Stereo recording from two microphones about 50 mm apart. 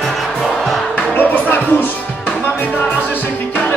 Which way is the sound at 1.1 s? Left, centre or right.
Left.